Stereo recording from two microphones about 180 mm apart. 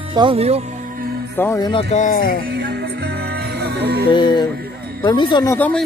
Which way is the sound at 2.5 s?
65° right (ahead or behind).